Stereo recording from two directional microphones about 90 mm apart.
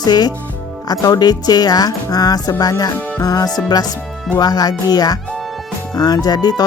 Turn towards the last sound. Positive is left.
turn(degrees=45)  # may be behind; listen again after turning